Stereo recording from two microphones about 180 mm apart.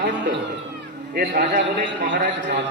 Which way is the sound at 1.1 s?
60° right (ahead or behind).